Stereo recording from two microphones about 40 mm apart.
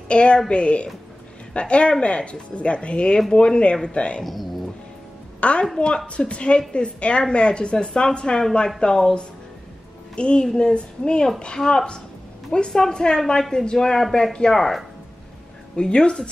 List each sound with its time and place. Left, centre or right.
0.1 s speech: left
4.2 s speech: centre
5.4 s a woman's voice: left
10.4 s a woman's voice: centre
14.5 s speech: centre
15.7 s speech: left